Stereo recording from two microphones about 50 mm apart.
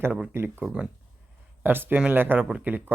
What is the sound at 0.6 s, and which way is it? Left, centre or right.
Speech, centre.